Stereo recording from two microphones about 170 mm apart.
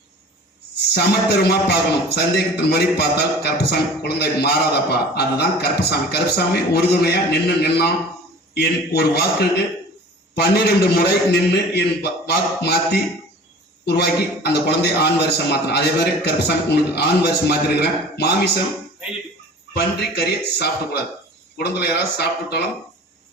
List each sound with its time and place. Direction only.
0.9 s a man's voice: 75° left (ahead or behind)
9.0 s a man's voice: 75° left (ahead or behind)
19.7 s a man's voice: 70° left (ahead or behind)